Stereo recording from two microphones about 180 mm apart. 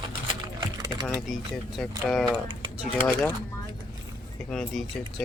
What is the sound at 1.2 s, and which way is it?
Speech, centre (ahead or behind).